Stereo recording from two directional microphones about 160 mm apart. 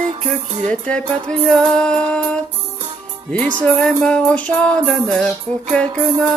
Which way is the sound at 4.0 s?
5° left (ahead or behind).